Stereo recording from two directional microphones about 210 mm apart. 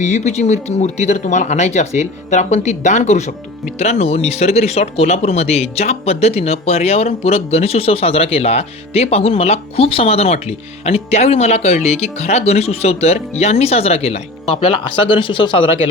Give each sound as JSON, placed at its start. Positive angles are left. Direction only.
{"t": 0.0, "sound": "speech", "side_deg": 35}